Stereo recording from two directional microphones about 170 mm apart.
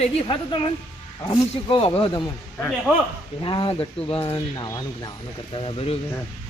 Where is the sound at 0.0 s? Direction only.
30° left (ahead or behind).